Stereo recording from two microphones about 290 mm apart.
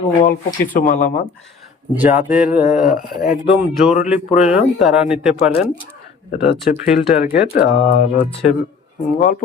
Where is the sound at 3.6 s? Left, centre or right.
Centre.